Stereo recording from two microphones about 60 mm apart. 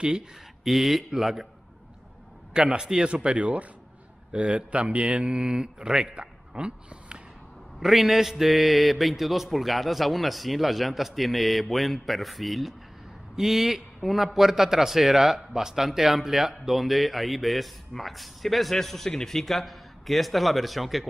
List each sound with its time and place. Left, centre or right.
0.7 s a man's voice: centre
2.5 s a man's voice: centre
7.8 s a man's voice: centre